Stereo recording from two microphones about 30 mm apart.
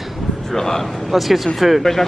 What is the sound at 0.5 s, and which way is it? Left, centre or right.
Speech, centre.